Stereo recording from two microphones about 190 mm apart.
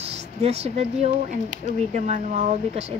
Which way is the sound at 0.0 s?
35° right (ahead or behind).